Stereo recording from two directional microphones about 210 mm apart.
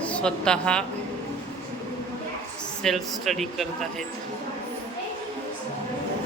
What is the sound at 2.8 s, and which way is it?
Speech, centre (ahead or behind).